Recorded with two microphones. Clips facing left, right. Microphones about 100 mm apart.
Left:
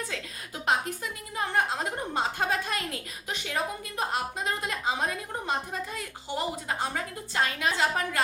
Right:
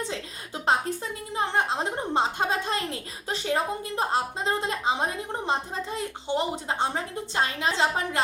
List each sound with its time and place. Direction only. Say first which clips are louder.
0.1 s a woman's voice: right 3 dB; 30° right (ahead or behind)